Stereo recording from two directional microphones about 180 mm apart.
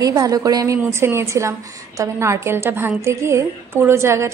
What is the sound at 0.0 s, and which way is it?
A woman's voice, 20° right (ahead or behind).